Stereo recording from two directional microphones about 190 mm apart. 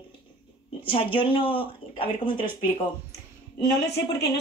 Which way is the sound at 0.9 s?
25° left (ahead or behind).